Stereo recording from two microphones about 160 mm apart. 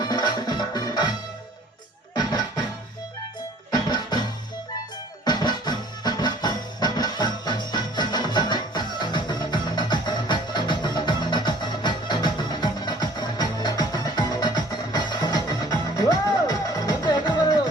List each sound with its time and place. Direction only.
0.0 s music: 25° left (ahead or behind)
2.1 s music: 25° left (ahead or behind)
3.7 s music: 25° left (ahead or behind)